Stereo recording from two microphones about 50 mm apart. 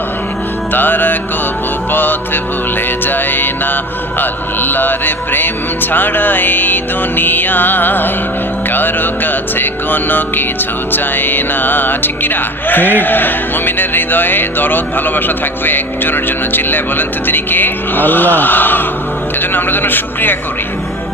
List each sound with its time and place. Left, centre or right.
0.7 s speech: left
1.9 s music: left
4.2 s speech: left